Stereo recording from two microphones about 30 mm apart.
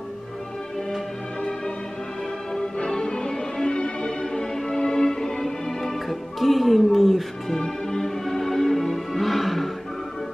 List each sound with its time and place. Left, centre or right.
2.8 s music: left
6.0 s music: centre
7.4 s music: centre